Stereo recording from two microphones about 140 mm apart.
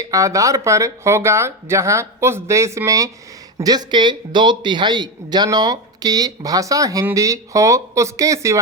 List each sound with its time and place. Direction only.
0.0 s a man's voice: 25° right (ahead or behind)